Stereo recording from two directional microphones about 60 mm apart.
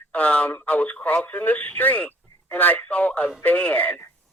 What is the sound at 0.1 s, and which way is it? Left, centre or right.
Speech, left.